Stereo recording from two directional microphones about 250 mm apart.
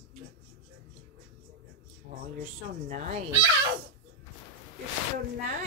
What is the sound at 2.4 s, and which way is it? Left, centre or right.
Speech, right.